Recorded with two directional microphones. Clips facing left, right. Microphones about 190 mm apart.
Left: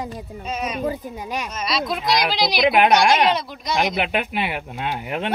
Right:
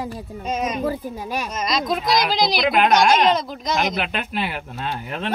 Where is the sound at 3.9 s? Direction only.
15° left (ahead or behind).